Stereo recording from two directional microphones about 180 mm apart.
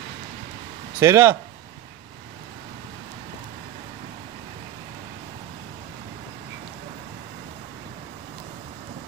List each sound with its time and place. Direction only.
0.9 s speech: 15° right (ahead or behind)